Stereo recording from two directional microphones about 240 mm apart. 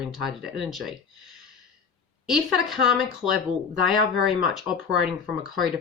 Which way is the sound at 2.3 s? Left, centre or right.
Centre.